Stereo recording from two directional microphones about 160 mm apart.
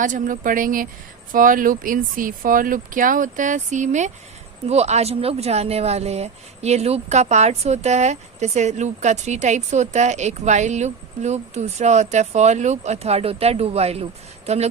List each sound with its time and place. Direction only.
0.0 s speech: 55° right (ahead or behind)